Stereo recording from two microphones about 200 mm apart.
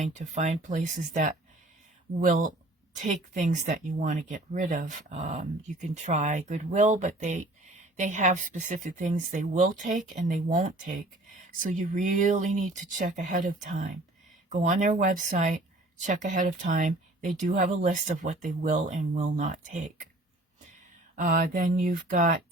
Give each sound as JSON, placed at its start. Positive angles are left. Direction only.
{"t": 0.0, "sound": "speech", "side_deg": -35}
{"t": 21.2, "sound": "speech", "side_deg": -40}